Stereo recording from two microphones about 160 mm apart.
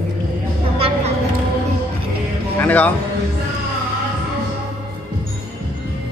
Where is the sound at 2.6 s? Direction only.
10° left (ahead or behind).